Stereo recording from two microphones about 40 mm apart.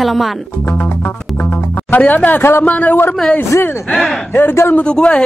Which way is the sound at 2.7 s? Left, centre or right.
Left.